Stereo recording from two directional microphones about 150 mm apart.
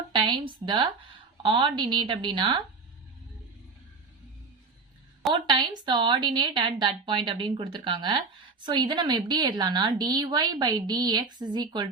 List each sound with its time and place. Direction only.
0.1 s a woman's voice: 30° right (ahead or behind)
5.3 s a woman's voice: 30° right (ahead or behind)